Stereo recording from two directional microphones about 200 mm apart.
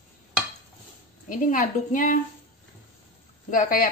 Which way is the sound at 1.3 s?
40° left (ahead or behind).